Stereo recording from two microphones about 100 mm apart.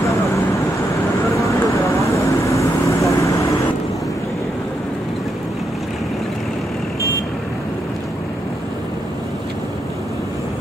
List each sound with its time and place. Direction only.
1.3 s vehicle: 30° left (ahead or behind)